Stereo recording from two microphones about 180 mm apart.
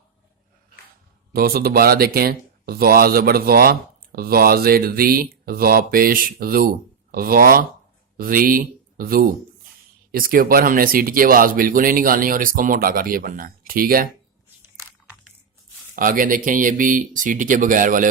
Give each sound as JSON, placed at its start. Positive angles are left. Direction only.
{"t": 1.3, "sound": "speech", "side_deg": -55}
{"t": 16.0, "sound": "speech", "side_deg": -50}